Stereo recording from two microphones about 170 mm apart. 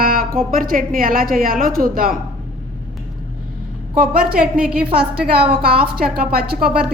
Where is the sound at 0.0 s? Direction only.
55° right (ahead or behind).